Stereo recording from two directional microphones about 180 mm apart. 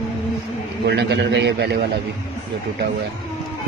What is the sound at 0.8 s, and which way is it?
Speech, 75° right (ahead or behind).